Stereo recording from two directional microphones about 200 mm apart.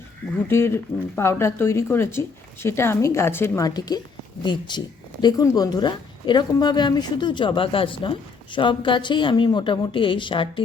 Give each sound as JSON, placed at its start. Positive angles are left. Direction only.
{"t": 0.4, "sound": "speech", "side_deg": 10}